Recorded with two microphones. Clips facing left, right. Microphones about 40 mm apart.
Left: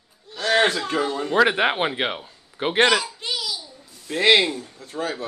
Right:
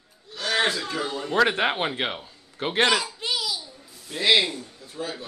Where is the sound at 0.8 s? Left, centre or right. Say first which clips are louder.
Left 5 dB; left.